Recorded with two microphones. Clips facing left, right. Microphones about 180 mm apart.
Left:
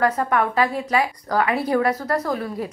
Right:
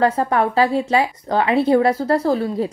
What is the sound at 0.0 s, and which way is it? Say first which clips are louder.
A woman's voice: right 3 dB; 30° right (ahead or behind).